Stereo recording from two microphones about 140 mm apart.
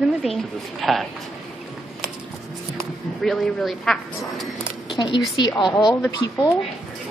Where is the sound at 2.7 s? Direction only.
5° left (ahead or behind).